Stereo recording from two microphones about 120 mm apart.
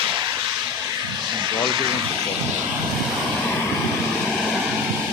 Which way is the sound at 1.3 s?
40° right (ahead or behind).